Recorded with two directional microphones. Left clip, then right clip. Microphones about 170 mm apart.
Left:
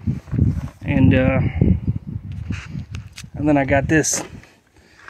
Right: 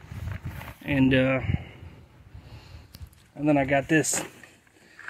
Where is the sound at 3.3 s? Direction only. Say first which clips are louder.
Left 6 dB; 20° left (ahead or behind).